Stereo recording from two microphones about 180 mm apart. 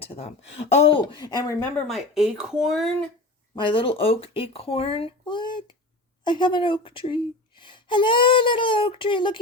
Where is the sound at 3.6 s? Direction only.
25° left (ahead or behind).